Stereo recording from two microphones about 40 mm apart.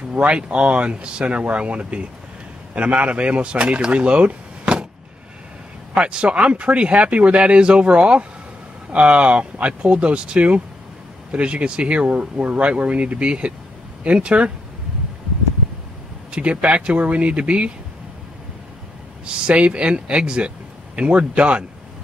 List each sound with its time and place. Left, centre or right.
0.1 s speech: right
5.9 s speech: right
16.3 s speech: right
19.2 s speech: right